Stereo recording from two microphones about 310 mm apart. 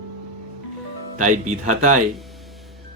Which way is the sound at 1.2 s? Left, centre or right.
Right.